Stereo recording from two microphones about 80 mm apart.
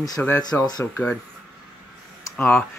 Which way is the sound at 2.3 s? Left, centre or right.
Centre.